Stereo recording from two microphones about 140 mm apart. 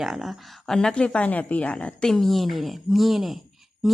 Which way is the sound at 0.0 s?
Centre (ahead or behind).